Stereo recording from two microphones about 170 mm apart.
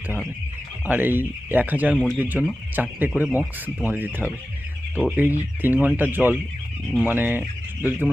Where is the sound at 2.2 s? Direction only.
10° right (ahead or behind).